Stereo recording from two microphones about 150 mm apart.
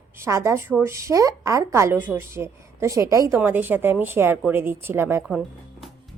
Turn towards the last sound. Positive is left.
turn(degrees=-5)  # may be behind; listen again after turning